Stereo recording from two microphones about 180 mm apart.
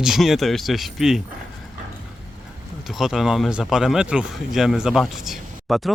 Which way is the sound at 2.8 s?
Centre (ahead or behind).